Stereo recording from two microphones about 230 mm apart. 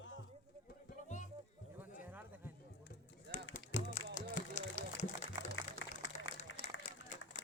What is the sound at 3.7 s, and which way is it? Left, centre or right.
Music, left.